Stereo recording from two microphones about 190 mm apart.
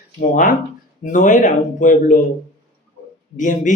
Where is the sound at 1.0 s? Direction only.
45° left (ahead or behind).